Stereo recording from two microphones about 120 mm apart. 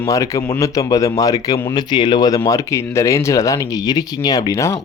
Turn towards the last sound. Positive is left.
turn(degrees=25)  # may be behind; listen again after turning